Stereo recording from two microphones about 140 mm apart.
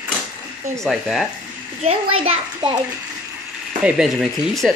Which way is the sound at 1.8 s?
45° right (ahead or behind).